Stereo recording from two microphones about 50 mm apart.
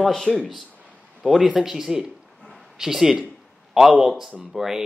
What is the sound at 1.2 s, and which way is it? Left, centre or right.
Speech, centre.